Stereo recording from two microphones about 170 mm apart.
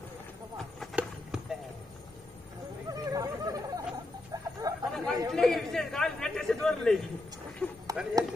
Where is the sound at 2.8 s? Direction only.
20° right (ahead or behind).